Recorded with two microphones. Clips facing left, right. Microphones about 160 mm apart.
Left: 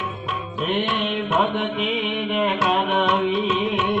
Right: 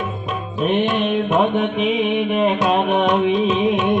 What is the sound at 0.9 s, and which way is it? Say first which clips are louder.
Music: right 5 dB; 15° right (ahead or behind).